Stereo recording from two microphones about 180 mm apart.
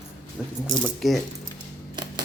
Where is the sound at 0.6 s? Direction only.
Centre (ahead or behind).